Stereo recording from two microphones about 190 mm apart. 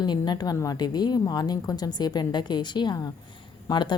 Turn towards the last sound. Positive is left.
turn(degrees=25)  # may be behind; listen again after turning